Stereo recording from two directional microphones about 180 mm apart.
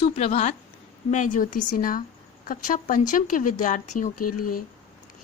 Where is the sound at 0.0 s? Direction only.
35° left (ahead or behind).